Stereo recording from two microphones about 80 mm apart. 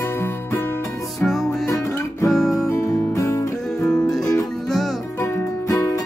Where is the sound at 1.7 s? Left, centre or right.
Left.